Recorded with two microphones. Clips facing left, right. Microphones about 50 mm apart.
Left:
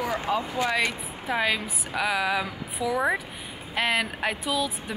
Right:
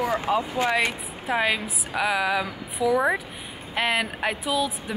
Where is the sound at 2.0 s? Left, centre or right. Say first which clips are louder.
Right 2 dB; centre.